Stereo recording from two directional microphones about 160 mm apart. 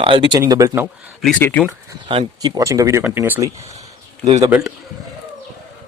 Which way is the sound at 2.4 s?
20° right (ahead or behind).